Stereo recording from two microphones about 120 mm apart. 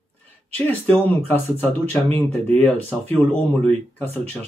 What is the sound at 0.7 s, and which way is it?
Speech, 15° left (ahead or behind).